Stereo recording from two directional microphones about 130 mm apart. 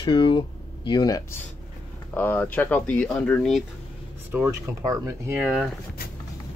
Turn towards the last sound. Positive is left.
turn(degrees=-10)  # may be behind; listen again after turning